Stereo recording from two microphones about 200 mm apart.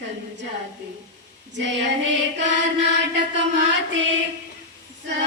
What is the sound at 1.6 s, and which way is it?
Speech, 60° right (ahead or behind).